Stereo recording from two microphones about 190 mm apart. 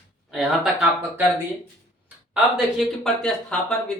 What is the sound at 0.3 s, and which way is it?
Speech, centre (ahead or behind).